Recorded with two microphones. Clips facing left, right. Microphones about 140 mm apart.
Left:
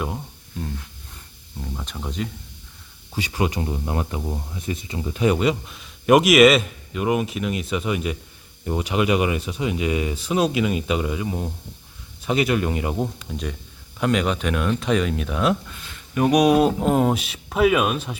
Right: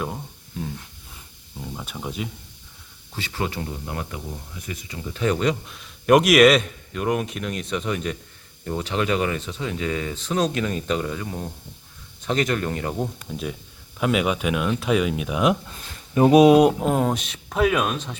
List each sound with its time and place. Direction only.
0.0 s a sound: centre (ahead or behind)
1.5 s speech: 5° right (ahead or behind)
3.2 s speech: 15° left (ahead or behind)
13.2 s speech: 5° right (ahead or behind)
15.7 s speech: 25° right (ahead or behind)
16.8 s speech: 5° left (ahead or behind)